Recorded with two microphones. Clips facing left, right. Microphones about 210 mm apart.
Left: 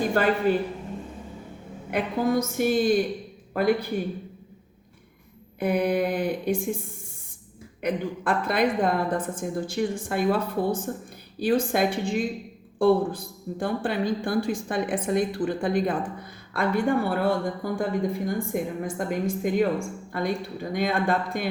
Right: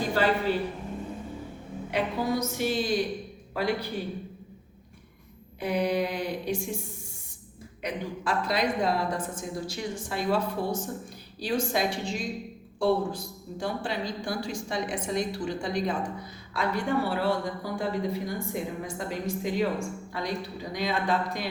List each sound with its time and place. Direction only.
0.1 s a woman's voice: 50° left (ahead or behind)
1.9 s a woman's voice: 50° left (ahead or behind)
5.5 s a woman's voice: 55° left (ahead or behind)